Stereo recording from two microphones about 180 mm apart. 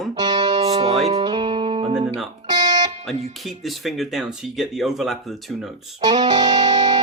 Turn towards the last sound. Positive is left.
turn(degrees=-20)  # may be behind; listen again after turning